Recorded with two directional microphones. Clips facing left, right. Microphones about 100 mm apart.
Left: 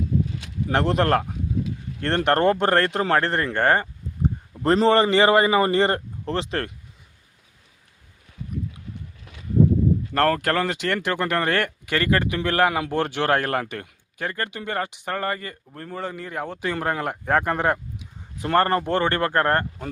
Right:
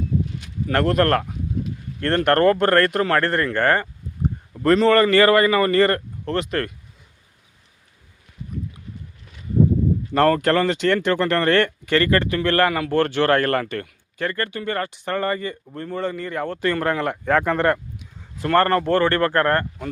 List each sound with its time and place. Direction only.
0.7 s speech: 25° left (ahead or behind)
10.2 s speech: centre (ahead or behind)
18.4 s speech: 20° left (ahead or behind)